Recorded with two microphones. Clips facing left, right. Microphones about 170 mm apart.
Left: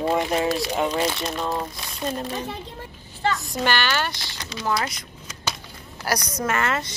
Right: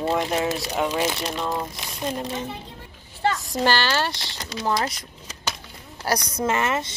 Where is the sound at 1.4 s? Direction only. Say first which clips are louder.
Left 1 dB; 10° left (ahead or behind).